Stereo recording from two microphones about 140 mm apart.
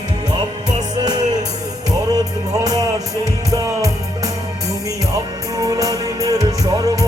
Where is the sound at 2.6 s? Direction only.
25° right (ahead or behind).